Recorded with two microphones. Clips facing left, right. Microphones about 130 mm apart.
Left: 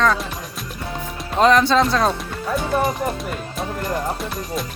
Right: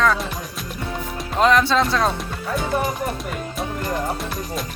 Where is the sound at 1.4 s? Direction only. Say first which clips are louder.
Left 2 dB; centre (ahead or behind).